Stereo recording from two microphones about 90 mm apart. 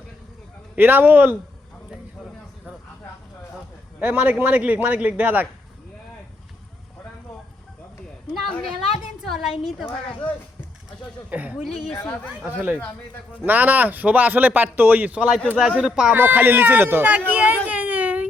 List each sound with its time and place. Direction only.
0.8 s speech: 20° right (ahead or behind)
4.0 s a man's voice: 15° right (ahead or behind)
9.2 s a woman's voice: centre (ahead or behind)
10.1 s speech: 15° left (ahead or behind)
11.3 s a man's voice: 15° right (ahead or behind)
11.6 s a woman's voice: centre (ahead or behind)
12.0 s speech: 15° left (ahead or behind)
12.5 s a man's voice: 20° right (ahead or behind)
16.1 s speech: 20° right (ahead or behind)
17.7 s a sound: 15° right (ahead or behind)